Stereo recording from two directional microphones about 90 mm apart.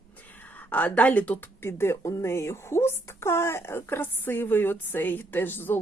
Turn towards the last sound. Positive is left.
turn(degrees=20)  # may be behind; listen again after turning